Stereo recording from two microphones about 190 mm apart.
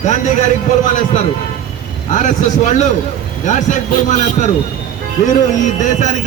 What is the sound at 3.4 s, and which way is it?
A man's voice, 40° left (ahead or behind).